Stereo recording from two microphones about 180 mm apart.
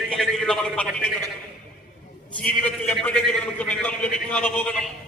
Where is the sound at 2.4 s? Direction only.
10° left (ahead or behind).